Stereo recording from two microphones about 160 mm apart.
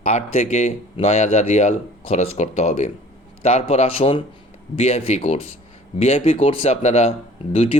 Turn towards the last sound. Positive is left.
turn(degrees=35)  # may be behind; listen again after turning